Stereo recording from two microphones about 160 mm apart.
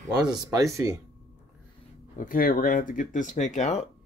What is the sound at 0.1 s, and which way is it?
Speech, 25° right (ahead or behind).